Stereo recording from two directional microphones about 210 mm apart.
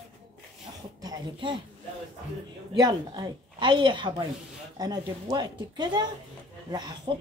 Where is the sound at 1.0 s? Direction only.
20° right (ahead or behind).